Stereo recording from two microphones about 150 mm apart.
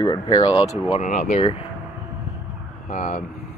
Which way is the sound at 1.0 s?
50° left (ahead or behind).